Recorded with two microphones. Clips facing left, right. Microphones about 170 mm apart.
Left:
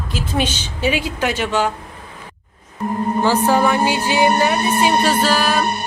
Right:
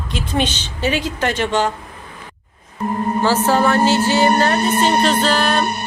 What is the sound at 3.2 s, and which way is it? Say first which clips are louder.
A woman's voice: even; 15° left (ahead or behind).